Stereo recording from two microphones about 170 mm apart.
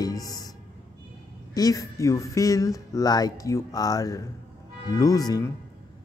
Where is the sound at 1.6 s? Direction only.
20° left (ahead or behind).